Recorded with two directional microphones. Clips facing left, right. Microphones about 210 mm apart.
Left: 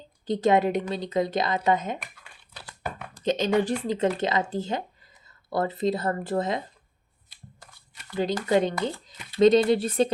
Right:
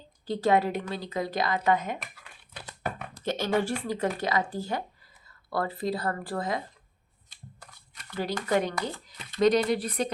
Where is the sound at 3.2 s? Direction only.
20° left (ahead or behind).